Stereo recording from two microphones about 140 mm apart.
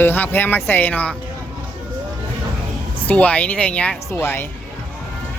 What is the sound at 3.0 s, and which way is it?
Speech, 10° left (ahead or behind).